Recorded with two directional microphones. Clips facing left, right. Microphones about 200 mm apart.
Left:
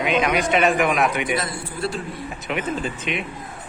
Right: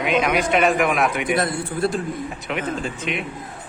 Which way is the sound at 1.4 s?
50° right (ahead or behind).